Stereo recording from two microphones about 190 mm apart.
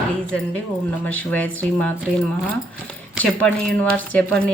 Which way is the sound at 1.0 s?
10° left (ahead or behind).